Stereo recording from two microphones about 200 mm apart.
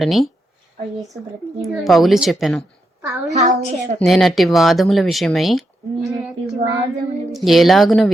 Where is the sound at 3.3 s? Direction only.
35° right (ahead or behind).